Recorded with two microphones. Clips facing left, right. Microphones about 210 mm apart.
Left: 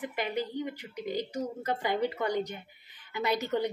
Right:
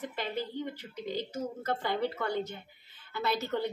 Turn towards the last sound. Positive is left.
turn(degrees=15)  # may be behind; listen again after turning